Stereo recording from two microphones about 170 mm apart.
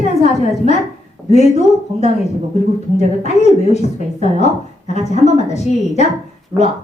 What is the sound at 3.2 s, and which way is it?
A woman's voice, 40° left (ahead or behind).